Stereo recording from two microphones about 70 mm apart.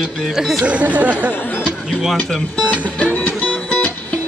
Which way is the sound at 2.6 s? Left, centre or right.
Centre.